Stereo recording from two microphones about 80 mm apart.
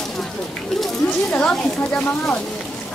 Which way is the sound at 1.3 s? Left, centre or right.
Centre.